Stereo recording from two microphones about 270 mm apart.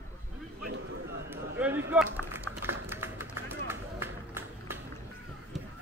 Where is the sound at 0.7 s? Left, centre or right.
Right.